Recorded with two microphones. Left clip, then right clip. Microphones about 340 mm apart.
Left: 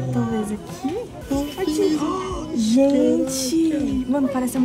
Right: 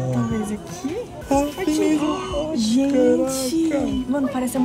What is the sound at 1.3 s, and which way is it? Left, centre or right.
Music, centre.